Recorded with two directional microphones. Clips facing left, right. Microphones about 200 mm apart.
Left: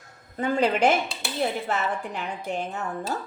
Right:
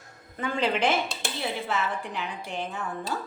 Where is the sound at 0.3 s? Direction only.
45° left (ahead or behind).